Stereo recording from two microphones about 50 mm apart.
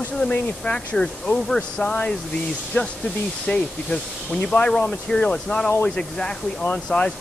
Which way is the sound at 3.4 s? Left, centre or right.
Centre.